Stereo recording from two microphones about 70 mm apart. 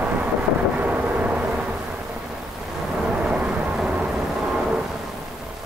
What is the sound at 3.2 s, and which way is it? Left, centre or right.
Vehicle, centre.